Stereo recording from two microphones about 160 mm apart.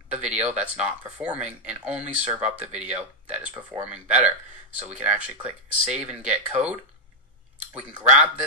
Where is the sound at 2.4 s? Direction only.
45° right (ahead or behind).